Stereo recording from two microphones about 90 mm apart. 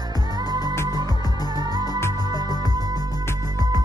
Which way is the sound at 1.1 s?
45° left (ahead or behind).